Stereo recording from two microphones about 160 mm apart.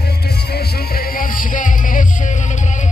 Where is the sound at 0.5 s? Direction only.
70° left (ahead or behind).